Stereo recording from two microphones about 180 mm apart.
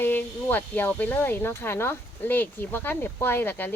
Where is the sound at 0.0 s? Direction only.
10° left (ahead or behind).